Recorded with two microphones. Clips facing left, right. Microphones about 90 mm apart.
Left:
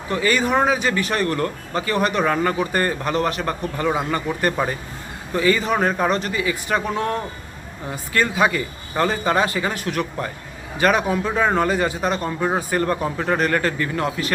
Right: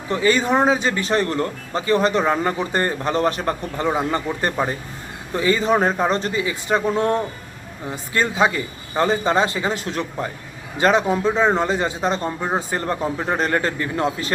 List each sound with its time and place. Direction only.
0.1 s speech: 30° right (ahead or behind)